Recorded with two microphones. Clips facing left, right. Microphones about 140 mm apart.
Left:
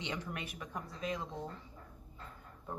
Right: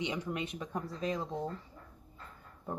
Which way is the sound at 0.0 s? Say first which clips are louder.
Right 5 dB; 20° right (ahead or behind).